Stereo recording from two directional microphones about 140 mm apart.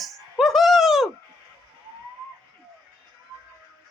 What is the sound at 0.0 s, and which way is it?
Music, centre (ahead or behind).